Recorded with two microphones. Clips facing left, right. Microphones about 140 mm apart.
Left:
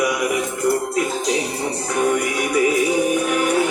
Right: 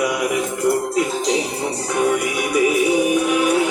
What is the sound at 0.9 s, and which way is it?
Music, 20° right (ahead or behind).